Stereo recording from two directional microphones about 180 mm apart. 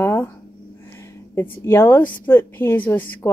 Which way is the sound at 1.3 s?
15° left (ahead or behind).